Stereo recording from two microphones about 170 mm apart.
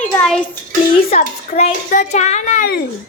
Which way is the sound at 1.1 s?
40° left (ahead or behind).